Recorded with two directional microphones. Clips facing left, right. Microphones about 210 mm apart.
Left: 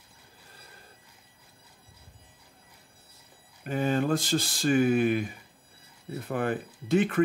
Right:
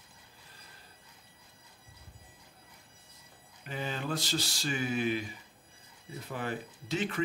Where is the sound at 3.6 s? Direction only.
50° left (ahead or behind).